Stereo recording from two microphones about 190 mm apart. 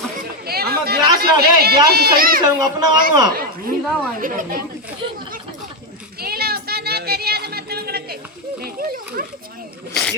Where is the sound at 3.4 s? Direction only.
50° right (ahead or behind).